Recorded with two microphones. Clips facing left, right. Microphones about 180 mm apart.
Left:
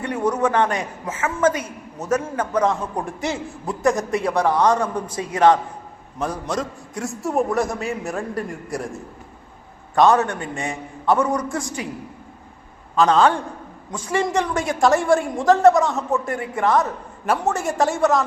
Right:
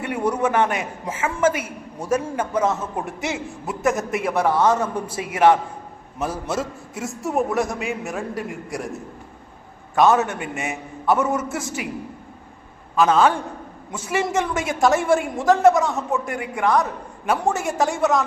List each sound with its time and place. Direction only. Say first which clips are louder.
0.0 s a woman's voice: left 1 dB; 10° right (ahead or behind)
9.9 s a man's voice: left 1 dB; 5° right (ahead or behind)
10.4 s a man's voice: even; 20° right (ahead or behind)
11.0 s a woman's voice: left 1 dB; 5° right (ahead or behind)
13.0 s a woman's voice: left 1 dB; 5° right (ahead or behind)